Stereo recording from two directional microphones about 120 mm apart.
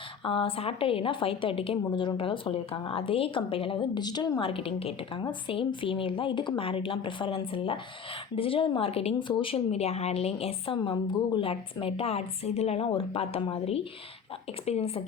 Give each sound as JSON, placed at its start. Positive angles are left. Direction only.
{"t": 0.3, "sound": "a woman's voice", "side_deg": 50}
{"t": 10.8, "sound": "a woman's voice", "side_deg": 45}